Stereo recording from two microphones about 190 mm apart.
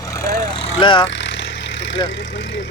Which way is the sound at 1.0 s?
70° left (ahead or behind).